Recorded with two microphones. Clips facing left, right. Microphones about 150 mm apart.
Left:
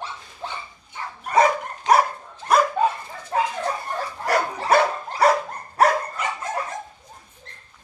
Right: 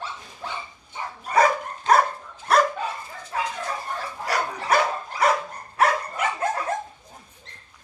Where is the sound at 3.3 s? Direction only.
45° left (ahead or behind).